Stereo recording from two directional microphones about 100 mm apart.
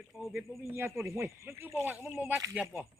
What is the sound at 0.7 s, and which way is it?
Speech, 25° right (ahead or behind).